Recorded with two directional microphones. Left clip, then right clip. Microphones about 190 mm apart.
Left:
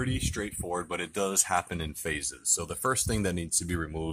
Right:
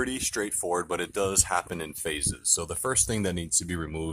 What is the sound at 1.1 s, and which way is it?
Speech, 5° right (ahead or behind).